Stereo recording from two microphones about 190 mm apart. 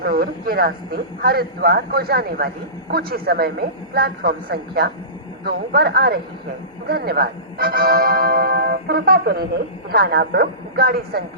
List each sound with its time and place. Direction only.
0.0 s a man's voice: 55° right (ahead or behind)